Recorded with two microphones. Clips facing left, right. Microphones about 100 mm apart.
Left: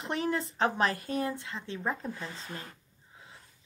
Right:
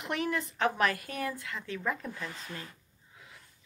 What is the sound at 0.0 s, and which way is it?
A woman's voice, 30° left (ahead or behind).